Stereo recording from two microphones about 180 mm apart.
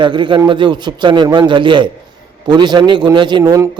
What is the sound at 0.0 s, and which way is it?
A man's voice, 25° right (ahead or behind).